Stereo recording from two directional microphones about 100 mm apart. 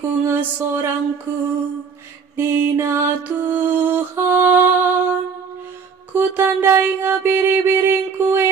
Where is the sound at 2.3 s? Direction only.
25° right (ahead or behind).